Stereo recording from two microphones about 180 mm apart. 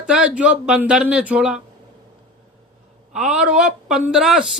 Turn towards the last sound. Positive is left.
turn(degrees=0)  # may be behind; listen again after turning